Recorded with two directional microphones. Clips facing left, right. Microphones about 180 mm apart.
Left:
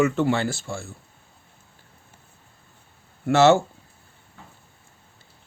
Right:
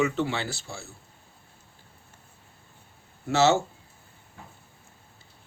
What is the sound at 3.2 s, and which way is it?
Speech, 55° left (ahead or behind).